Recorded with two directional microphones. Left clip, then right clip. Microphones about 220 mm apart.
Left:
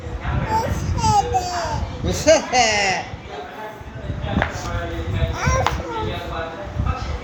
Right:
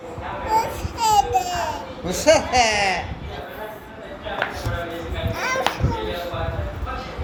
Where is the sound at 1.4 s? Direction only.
5° left (ahead or behind).